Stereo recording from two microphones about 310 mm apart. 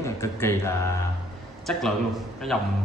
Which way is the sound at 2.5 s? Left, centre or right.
Centre.